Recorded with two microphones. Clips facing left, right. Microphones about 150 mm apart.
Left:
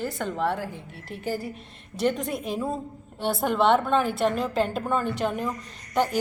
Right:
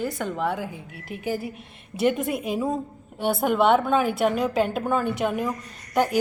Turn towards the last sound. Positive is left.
turn(degrees=-5)  # may be behind; listen again after turning